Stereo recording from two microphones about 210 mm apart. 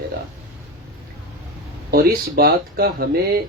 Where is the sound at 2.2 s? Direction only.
45° right (ahead or behind).